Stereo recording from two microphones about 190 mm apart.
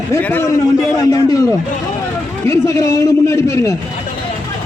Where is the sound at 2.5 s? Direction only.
15° left (ahead or behind).